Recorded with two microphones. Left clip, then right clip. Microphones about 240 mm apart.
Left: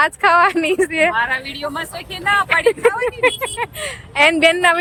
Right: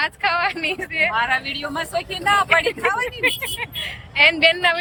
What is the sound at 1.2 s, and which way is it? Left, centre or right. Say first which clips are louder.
Speech: left 1 dB; centre.